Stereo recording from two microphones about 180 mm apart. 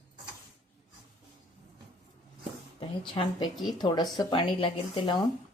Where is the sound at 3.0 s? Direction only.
25° left (ahead or behind).